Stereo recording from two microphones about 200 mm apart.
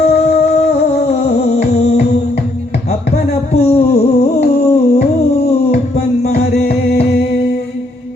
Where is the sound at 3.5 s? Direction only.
30° left (ahead or behind).